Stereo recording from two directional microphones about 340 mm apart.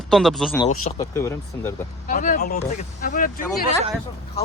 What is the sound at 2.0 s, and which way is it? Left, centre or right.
Speech, left.